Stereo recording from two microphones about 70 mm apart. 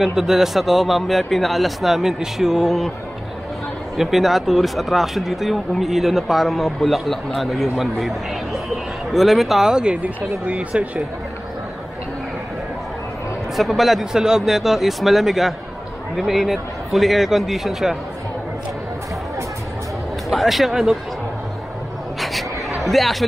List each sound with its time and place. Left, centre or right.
0.0 s speech: centre
3.9 s speech: centre
9.1 s speech: centre
13.6 s speech: centre
20.2 s speech: centre
22.8 s speech: centre